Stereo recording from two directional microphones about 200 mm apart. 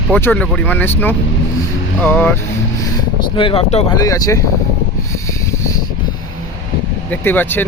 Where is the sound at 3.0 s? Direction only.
25° left (ahead or behind).